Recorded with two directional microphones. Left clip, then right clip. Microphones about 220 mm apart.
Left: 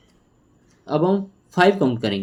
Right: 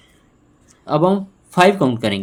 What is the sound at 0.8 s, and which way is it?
Speech, 40° right (ahead or behind).